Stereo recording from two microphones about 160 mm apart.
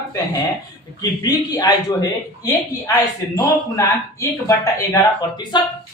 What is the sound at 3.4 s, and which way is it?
A man's voice, 20° left (ahead or behind).